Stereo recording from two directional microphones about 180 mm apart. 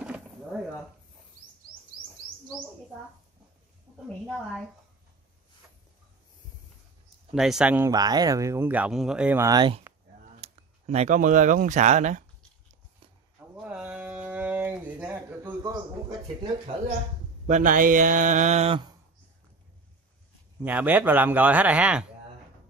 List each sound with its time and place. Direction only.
0.0 s a sound: 5° right (ahead or behind)
7.3 s speech: 5° right (ahead or behind)
7.9 s speech: 20° right (ahead or behind)
9.5 s speech: 25° right (ahead or behind)
10.4 s speech: 35° right (ahead or behind)
13.4 s a sound: 5° right (ahead or behind)
17.5 s speech: 45° right (ahead or behind)
20.6 s speech: 10° right (ahead or behind)